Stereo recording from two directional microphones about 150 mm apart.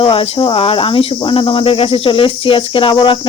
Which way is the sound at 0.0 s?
35° left (ahead or behind).